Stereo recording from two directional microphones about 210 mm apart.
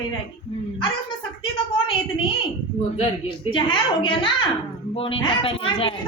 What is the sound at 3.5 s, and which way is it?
A woman's voice, 25° left (ahead or behind).